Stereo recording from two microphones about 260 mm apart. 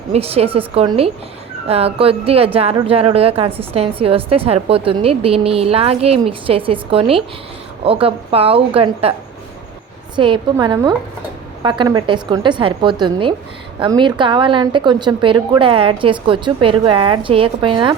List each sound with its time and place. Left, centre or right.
0.1 s a woman's voice: right
10.2 s a woman's voice: centre